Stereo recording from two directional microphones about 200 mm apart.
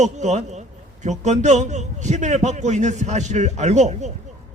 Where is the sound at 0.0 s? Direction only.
35° right (ahead or behind).